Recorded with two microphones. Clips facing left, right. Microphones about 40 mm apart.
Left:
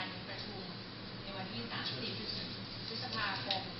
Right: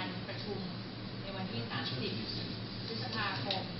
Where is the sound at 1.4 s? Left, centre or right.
Centre.